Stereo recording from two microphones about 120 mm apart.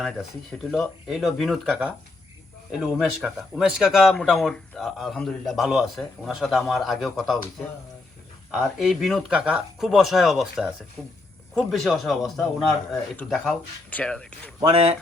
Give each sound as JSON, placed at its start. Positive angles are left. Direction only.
{"t": 0.7, "sound": "speech", "side_deg": 0}
{"t": 2.8, "sound": "speech", "side_deg": -5}
{"t": 8.5, "sound": "speech", "side_deg": 0}
{"t": 14.7, "sound": "speech", "side_deg": -60}